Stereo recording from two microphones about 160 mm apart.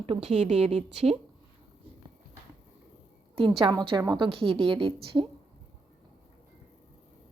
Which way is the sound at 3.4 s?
35° right (ahead or behind).